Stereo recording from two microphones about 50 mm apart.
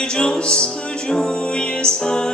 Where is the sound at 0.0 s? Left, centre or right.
Centre.